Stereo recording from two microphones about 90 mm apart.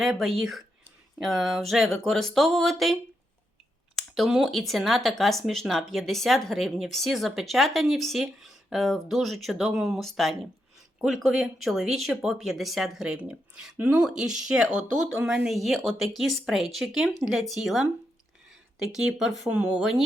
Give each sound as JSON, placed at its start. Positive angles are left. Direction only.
{"t": 0.0, "sound": "speech", "side_deg": 0}
{"t": 14.0, "sound": "speech", "side_deg": -5}